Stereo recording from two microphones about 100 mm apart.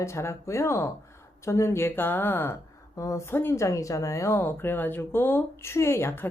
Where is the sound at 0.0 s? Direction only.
30° left (ahead or behind).